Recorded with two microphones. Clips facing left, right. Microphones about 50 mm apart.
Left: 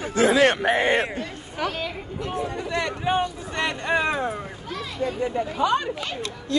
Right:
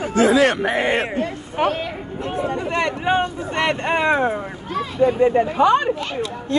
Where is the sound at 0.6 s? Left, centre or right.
Right.